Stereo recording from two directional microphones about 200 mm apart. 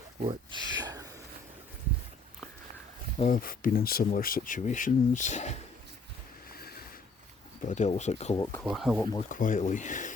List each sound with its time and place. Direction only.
0.2 s speech: 25° right (ahead or behind)
3.2 s speech: 40° left (ahead or behind)
6.5 s a sound: 50° left (ahead or behind)
7.7 s speech: 35° left (ahead or behind)
8.6 s speech: centre (ahead or behind)
9.3 s speech: 40° left (ahead or behind)